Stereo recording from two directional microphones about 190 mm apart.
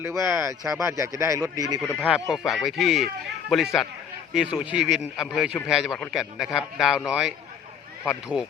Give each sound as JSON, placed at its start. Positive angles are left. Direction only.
{"t": 0.0, "sound": "speech", "side_deg": -15}
{"t": 2.0, "sound": "a man's voice", "side_deg": -5}
{"t": 8.3, "sound": "speech", "side_deg": 30}